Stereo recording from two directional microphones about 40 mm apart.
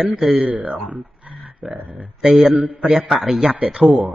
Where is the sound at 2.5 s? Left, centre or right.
Right.